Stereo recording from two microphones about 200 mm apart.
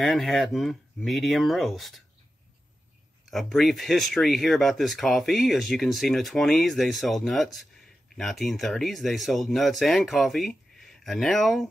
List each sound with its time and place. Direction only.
0.0 s speech: centre (ahead or behind)
3.3 s speech: centre (ahead or behind)